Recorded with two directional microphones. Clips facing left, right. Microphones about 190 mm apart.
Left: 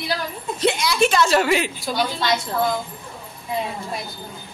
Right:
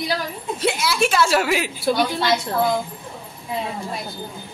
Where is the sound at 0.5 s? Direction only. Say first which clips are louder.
Left 2 dB; 5° right (ahead or behind).